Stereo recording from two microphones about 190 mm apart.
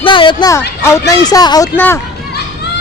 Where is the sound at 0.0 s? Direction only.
25° left (ahead or behind); by 2.0 s 10° left (ahead or behind).